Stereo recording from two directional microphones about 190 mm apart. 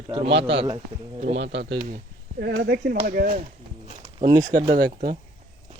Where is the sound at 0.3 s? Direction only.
65° right (ahead or behind).